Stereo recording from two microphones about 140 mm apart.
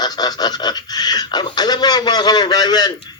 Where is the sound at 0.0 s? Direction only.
30° left (ahead or behind).